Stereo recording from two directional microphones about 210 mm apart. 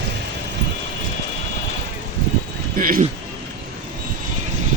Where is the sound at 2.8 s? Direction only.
40° right (ahead or behind).